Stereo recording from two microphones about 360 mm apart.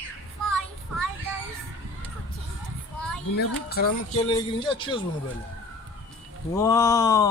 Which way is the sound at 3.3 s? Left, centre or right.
Left.